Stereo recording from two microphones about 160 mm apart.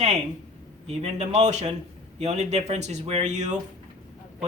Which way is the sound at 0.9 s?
45° right (ahead or behind).